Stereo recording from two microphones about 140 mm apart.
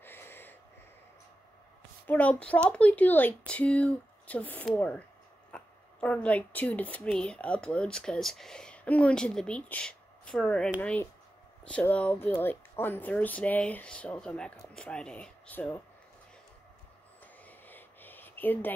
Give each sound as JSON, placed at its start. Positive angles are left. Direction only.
{"t": 0.0, "sound": "wheeze", "side_deg": 15}
{"t": 2.0, "sound": "speech", "side_deg": 10}
{"t": 17.5, "sound": "a sound", "side_deg": 15}